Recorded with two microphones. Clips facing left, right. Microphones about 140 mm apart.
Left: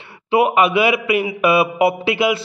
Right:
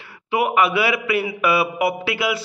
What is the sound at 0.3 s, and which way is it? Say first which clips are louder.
A man's voice: left 4 dB; 20° left (ahead or behind).